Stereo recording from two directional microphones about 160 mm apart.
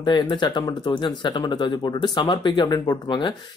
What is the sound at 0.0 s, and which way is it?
Speech, 30° left (ahead or behind).